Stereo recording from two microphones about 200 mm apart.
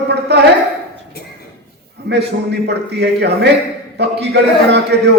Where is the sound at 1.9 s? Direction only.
55° right (ahead or behind).